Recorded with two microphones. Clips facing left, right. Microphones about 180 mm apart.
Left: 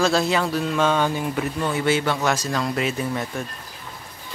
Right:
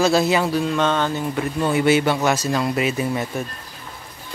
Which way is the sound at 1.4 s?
10° right (ahead or behind).